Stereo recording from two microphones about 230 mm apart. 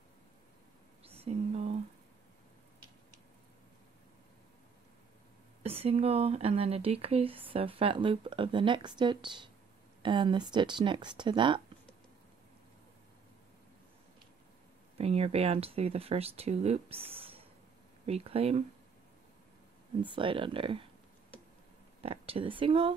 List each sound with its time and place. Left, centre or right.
1.0 s a sound: right
5.6 s speech: right
15.0 s speech: right
17.1 s a sound: right
18.0 s speech: right
20.2 s speech: right
22.0 s speech: right